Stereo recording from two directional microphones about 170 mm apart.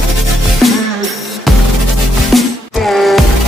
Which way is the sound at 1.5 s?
Centre (ahead or behind).